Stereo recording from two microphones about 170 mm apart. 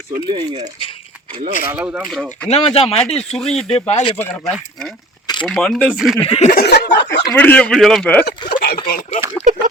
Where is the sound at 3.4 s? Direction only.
5° left (ahead or behind).